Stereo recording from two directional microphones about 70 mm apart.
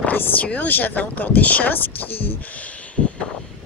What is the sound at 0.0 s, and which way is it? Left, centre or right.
Speech, left.